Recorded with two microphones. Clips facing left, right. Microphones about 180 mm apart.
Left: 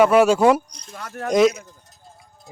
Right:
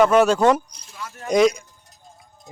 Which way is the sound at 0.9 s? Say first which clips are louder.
Left 5 dB; 55° left (ahead or behind).